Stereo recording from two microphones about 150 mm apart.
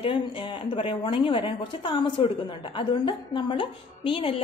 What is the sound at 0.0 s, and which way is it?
Speech, 35° left (ahead or behind).